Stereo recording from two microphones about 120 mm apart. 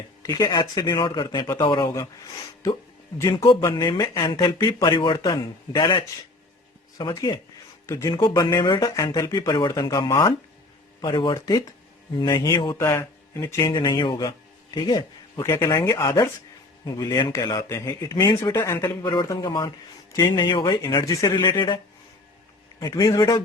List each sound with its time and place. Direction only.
0.2 s speech: 35° left (ahead or behind)
3.2 s speech: 35° left (ahead or behind)
7.1 s speech: 30° left (ahead or behind)
8.1 s speech: 45° left (ahead or behind)
8.4 s speech: 30° left (ahead or behind)
11.3 s speech: 30° left (ahead or behind)
13.7 s speech: 40° left (ahead or behind)
14.3 s a sound: 35° left (ahead or behind)
15.4 s speech: 25° left (ahead or behind)
19.0 s speech: 40° left (ahead or behind)
20.8 s speech: 30° left (ahead or behind)
21.3 s speech: 40° left (ahead or behind)
22.8 s speech: 30° left (ahead or behind)